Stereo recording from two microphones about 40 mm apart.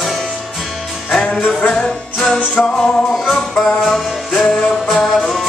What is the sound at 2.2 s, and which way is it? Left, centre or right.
Music, left.